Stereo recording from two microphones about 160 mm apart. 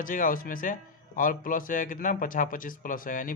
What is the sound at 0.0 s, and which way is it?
A man's voice, 60° left (ahead or behind).